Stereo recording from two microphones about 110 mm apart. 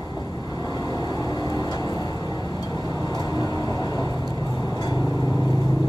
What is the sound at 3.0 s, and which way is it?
Vehicle, 40° left (ahead or behind).